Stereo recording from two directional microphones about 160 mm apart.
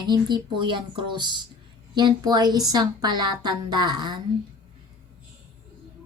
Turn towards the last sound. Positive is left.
turn(degrees=-25)  # may be behind; listen again after turning